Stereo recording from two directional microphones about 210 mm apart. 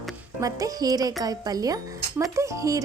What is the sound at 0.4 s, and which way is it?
Speech, 15° right (ahead or behind).